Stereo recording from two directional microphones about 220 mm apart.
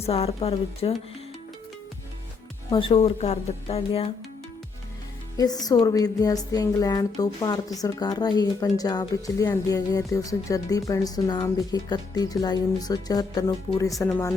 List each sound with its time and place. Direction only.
0.0 s speech: 30° left (ahead or behind)
2.6 s speech: 25° left (ahead or behind)
5.4 s a woman's voice: 15° left (ahead or behind)